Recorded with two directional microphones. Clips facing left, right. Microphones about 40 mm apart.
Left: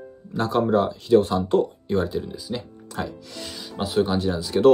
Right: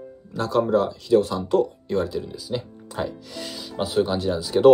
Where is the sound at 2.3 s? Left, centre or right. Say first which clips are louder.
Right 2 dB; centre.